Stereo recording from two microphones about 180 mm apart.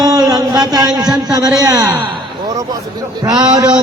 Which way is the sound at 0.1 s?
20° right (ahead or behind).